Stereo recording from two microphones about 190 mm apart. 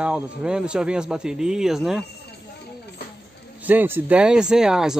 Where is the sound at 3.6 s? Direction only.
10° right (ahead or behind).